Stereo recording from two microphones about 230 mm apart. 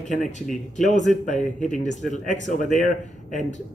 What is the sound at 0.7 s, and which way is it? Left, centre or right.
Speech, left.